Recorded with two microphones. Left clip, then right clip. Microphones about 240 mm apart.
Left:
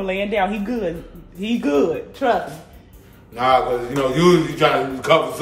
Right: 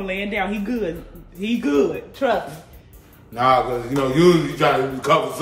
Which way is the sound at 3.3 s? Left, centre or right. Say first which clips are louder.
Left 1 dB; centre.